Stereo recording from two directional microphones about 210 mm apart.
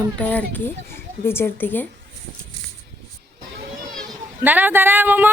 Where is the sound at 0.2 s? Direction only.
5° left (ahead or behind).